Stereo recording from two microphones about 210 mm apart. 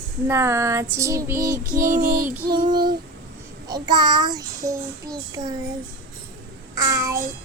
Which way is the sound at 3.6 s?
20° right (ahead or behind).